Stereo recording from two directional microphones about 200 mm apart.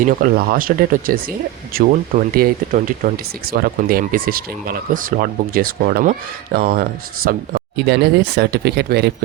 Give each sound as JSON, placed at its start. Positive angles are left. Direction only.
{"t": 0.0, "sound": "speech", "side_deg": -45}